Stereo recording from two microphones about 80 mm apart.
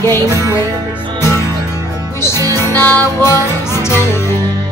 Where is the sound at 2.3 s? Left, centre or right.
Right.